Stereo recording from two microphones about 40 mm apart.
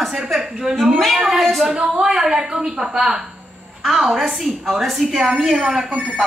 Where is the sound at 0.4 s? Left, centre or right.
Centre.